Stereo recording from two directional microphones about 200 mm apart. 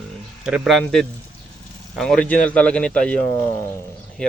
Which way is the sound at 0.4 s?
Centre (ahead or behind).